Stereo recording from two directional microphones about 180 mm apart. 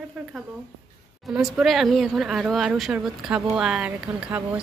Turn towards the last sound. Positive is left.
turn(degrees=-10)  # may be behind; listen again after turning